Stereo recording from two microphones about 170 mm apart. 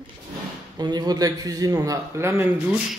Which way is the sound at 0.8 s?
25° right (ahead or behind).